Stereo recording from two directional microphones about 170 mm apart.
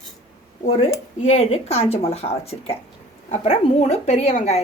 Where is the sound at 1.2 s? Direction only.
40° left (ahead or behind).